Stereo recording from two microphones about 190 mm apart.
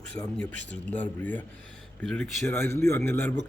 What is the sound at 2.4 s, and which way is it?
Speech, 15° left (ahead or behind).